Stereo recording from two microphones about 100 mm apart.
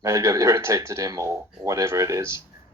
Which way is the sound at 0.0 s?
35° right (ahead or behind).